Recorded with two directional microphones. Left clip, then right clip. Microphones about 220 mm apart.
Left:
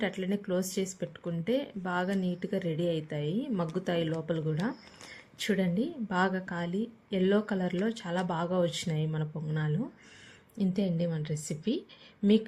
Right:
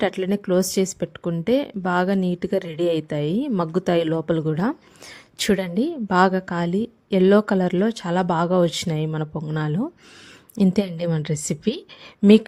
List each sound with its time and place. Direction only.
0.0 s speech: 45° right (ahead or behind)